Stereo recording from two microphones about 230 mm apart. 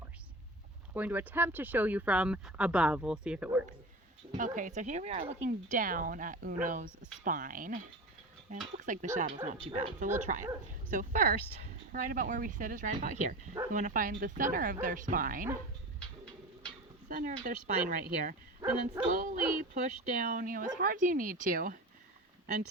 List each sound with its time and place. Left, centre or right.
0.9 s speech: centre
4.4 s a woman's voice: right
17.1 s a woman's voice: right